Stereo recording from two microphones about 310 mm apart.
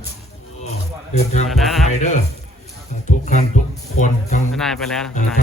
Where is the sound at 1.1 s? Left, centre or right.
Left.